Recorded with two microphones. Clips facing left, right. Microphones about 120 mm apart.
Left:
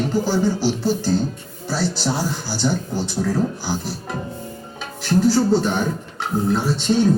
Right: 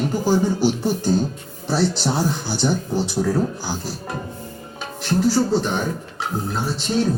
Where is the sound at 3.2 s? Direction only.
Centre (ahead or behind).